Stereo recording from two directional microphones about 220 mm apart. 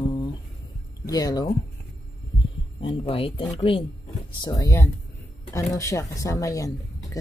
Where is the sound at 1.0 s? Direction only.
15° left (ahead or behind).